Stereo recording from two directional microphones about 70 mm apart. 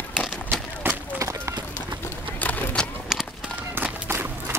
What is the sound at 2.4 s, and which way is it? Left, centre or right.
Vehicle, left.